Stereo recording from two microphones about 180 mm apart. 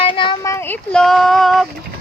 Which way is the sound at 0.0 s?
30° left (ahead or behind).